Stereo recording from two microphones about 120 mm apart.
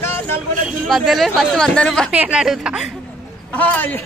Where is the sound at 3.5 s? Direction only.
15° left (ahead or behind).